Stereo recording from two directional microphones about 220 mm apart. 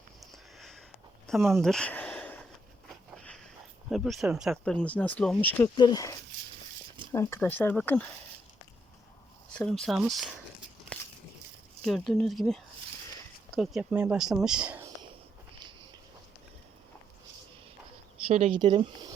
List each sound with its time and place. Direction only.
0.3 s a sound: centre (ahead or behind)
1.3 s speech: centre (ahead or behind)
3.8 s speech: centre (ahead or behind)
5.7 s speech: 20° left (ahead or behind)
9.5 s speech: 5° left (ahead or behind)
10.9 s a sound: 5° left (ahead or behind)
11.8 s speech: centre (ahead or behind)
18.3 s speech: 30° right (ahead or behind)